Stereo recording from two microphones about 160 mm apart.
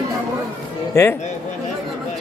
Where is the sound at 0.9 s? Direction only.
15° left (ahead or behind).